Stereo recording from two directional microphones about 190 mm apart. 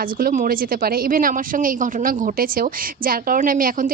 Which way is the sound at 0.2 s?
45° right (ahead or behind).